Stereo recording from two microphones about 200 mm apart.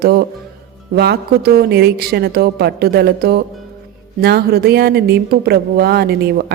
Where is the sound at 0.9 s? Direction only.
50° right (ahead or behind).